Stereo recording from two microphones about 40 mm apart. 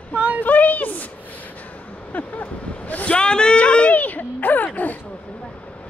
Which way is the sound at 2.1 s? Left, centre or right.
Left.